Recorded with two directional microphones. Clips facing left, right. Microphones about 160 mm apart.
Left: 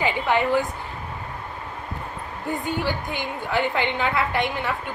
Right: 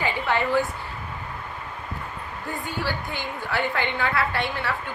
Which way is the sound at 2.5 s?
20° left (ahead or behind).